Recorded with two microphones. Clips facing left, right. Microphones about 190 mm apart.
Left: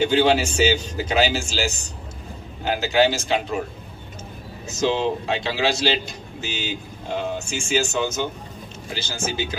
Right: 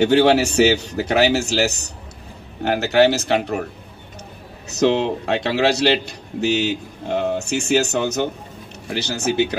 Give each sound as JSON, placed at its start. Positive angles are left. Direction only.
{"t": 0.0, "sound": "a man's voice", "side_deg": -65}
{"t": 4.6, "sound": "a man's voice", "side_deg": -65}